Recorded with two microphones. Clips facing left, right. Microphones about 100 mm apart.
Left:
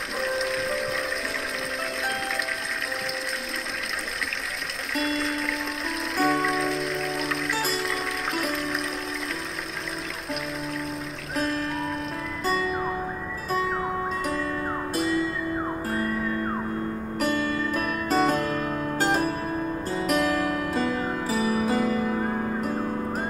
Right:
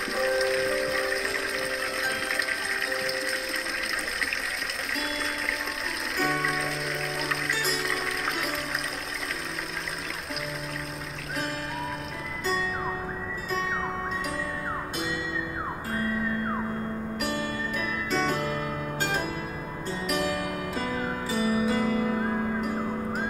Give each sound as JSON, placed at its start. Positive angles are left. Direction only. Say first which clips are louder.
{"t": 0.2, "sound": "music", "louder": "right 2 dB", "side_deg": 0}
{"t": 4.9, "sound": "music", "louder": "left 7 dB", "side_deg": 0}
{"t": 11.3, "sound": "music", "louder": "left 6 dB", "side_deg": 0}
{"t": 17.2, "sound": "music", "louder": "left 7 dB", "side_deg": 40}